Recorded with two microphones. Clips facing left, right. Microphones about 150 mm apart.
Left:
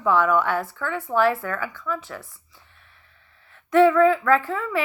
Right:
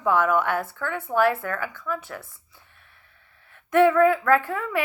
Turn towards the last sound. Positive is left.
turn(degrees=-50)  # may be behind; listen again after turning